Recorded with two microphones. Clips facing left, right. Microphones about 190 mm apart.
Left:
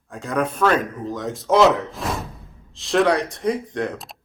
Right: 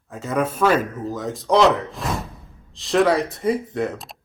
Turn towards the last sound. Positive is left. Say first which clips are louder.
# right 1 dB
turn(degrees=0)  # may be behind; listen again after turning